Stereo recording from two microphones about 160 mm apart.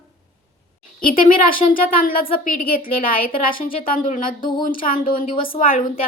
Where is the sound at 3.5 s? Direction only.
60° left (ahead or behind).